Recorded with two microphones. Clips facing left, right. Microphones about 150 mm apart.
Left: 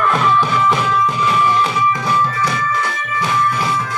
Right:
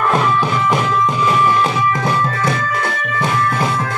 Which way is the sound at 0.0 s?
35° right (ahead or behind).